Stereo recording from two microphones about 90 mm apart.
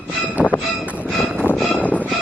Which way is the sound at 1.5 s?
Centre (ahead or behind).